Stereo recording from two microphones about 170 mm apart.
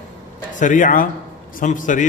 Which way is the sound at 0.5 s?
50° left (ahead or behind).